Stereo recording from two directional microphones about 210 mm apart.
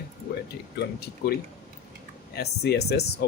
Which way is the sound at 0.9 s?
50° left (ahead or behind).